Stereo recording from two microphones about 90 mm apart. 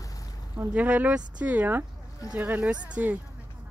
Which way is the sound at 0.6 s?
15° right (ahead or behind).